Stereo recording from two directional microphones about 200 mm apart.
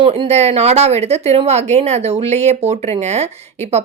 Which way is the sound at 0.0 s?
25° right (ahead or behind).